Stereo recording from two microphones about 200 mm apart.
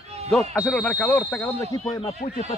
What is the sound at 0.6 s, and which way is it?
Speech, 5° left (ahead or behind).